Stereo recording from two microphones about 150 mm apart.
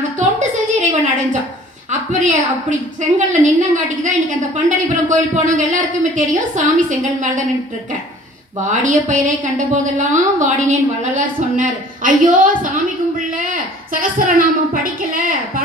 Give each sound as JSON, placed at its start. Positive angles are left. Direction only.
{"t": 0.2, "sound": "a sound", "side_deg": -55}
{"t": 1.9, "sound": "a woman's voice", "side_deg": -55}
{"t": 8.6, "sound": "a woman's voice", "side_deg": -60}